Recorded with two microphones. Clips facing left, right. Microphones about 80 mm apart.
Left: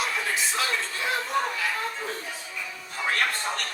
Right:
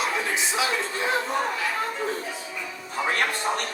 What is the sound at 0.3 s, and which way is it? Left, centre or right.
Music, centre.